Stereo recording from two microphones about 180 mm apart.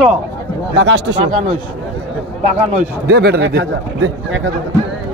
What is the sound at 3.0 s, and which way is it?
A man's voice, 65° right (ahead or behind).